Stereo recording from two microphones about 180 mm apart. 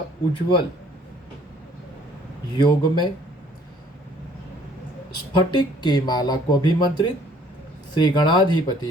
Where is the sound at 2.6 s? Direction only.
25° left (ahead or behind).